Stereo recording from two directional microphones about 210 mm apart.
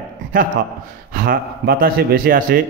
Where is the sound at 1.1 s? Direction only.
45° right (ahead or behind).